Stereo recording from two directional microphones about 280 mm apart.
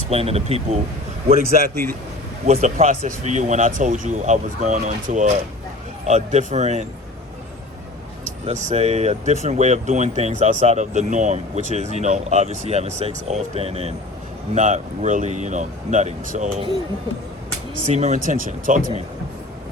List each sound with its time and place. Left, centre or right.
0.1 s speech: right
8.2 s speech: right
17.8 s speech: right